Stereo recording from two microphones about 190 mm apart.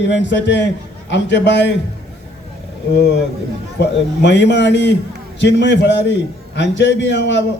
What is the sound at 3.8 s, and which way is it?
A man's voice, 65° left (ahead or behind).